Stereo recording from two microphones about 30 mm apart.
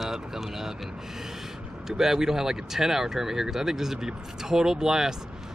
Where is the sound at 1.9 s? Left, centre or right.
Centre.